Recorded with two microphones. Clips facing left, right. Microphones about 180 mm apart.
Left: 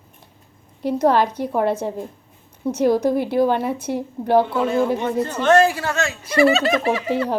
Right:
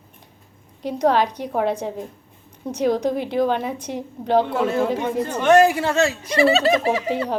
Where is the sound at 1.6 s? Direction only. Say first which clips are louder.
Left 1 dB; 15° right (ahead or behind).